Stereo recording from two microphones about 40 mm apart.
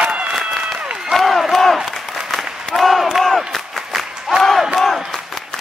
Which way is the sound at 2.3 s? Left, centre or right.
Centre.